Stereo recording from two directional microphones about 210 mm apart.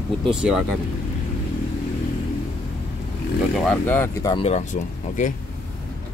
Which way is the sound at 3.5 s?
5° left (ahead or behind).